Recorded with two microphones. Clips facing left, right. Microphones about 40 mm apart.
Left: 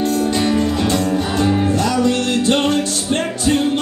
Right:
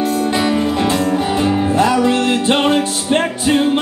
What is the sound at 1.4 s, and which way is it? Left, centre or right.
Music, right.